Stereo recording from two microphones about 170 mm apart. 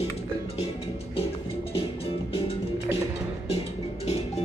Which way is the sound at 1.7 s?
35° left (ahead or behind).